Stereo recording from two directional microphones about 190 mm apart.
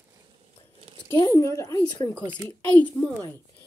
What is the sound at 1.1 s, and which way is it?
Speech, 20° left (ahead or behind).